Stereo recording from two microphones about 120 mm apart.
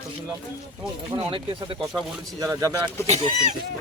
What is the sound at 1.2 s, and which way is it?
Speech, 45° right (ahead or behind).